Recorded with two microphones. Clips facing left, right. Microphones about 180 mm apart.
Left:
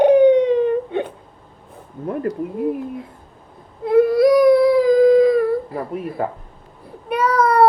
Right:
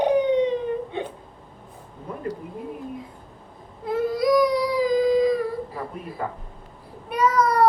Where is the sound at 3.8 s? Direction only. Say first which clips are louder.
Left 9 dB; 60° left (ahead or behind).